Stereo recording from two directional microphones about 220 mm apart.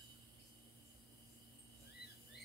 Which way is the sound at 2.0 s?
45° left (ahead or behind).